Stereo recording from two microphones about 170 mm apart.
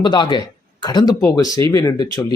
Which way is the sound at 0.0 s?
30° left (ahead or behind).